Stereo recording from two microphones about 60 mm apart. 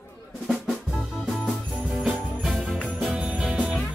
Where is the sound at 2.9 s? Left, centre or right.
Centre.